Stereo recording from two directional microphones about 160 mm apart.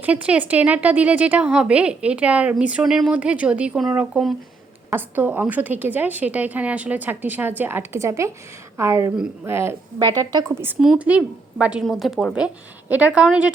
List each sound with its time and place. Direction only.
0.0 s a woman's voice: 10° right (ahead or behind)
10.0 s a woman's voice: 25° right (ahead or behind); by 13.5 s 5° right (ahead or behind)